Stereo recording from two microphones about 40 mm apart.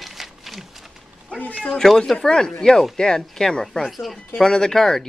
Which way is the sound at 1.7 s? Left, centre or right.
Centre.